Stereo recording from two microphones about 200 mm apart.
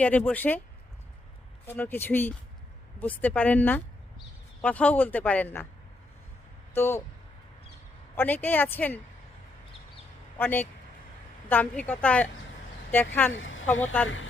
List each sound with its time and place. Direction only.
0.0 s speech: 5° left (ahead or behind)
1.6 s speech: 10° left (ahead or behind)
6.7 s speech: 10° left (ahead or behind)
8.1 s speech: 10° left (ahead or behind)
10.3 s speech: 10° left (ahead or behind)
13.3 s speech: 75° left (ahead or behind)